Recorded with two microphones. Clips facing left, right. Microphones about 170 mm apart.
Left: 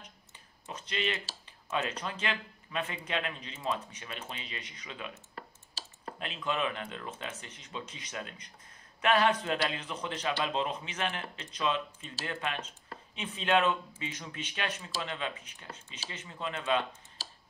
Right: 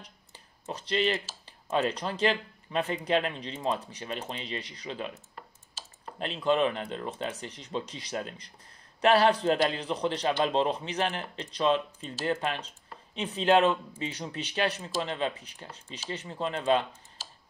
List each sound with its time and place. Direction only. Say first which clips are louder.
0.0 s clicking: right 3 dB; 35° right (ahead or behind)
1.4 s a man's voice: right 6 dB; 35° right (ahead or behind)